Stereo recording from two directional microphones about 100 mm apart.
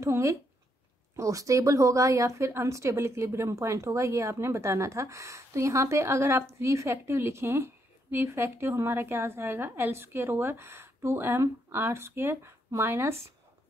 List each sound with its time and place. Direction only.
0.0 s a woman's voice: 30° right (ahead or behind)